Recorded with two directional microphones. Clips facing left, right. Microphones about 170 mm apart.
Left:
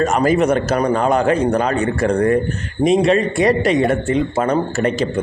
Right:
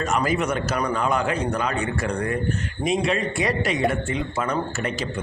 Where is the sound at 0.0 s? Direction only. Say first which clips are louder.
Left 8 dB; 45° left (ahead or behind).